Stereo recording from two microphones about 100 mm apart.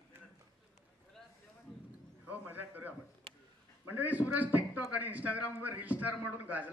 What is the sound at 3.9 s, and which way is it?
A man's voice, 15° right (ahead or behind).